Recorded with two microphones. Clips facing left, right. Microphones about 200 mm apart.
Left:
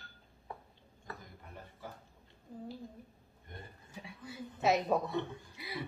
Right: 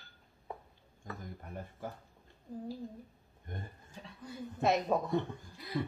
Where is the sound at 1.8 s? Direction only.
50° right (ahead or behind).